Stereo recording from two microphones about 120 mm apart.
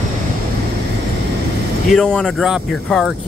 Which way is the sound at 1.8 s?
5° left (ahead or behind).